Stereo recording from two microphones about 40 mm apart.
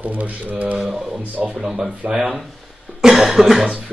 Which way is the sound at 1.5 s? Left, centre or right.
Centre.